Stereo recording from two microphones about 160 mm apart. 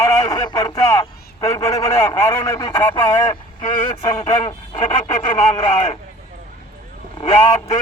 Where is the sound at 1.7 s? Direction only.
40° left (ahead or behind).